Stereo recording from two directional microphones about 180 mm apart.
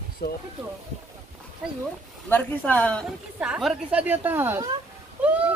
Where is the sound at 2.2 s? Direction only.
10° left (ahead or behind).